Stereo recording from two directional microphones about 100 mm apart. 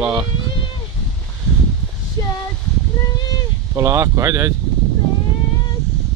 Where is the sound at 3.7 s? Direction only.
30° right (ahead or behind).